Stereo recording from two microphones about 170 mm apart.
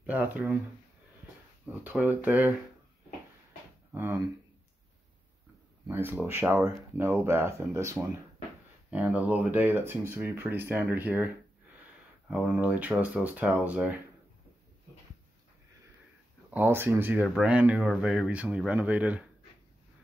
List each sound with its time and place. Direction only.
0.0 s speech: 10° right (ahead or behind)
1.7 s speech: 10° right (ahead or behind)
3.9 s speech: 15° right (ahead or behind)
5.9 s speech: 10° right (ahead or behind)
12.3 s speech: 5° right (ahead or behind)
16.4 s speech: 10° right (ahead or behind)